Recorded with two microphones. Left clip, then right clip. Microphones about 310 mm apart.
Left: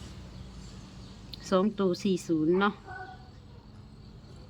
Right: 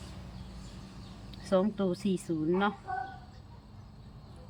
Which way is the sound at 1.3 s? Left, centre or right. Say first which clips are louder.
Left 1 dB; centre.